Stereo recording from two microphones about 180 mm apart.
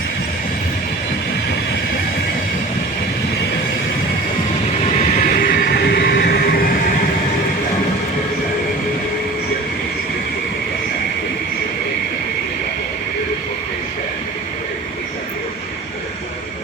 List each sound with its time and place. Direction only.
5.4 s train: 55° left (ahead or behind)